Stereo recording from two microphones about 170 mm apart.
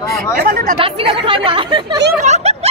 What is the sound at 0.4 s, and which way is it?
Speech, 60° right (ahead or behind).